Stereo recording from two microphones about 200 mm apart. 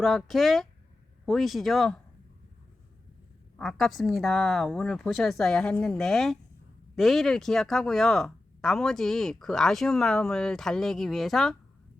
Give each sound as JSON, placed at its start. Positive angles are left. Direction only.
{"t": 0.0, "sound": "speech", "side_deg": 0}
{"t": 3.6, "sound": "speech", "side_deg": 0}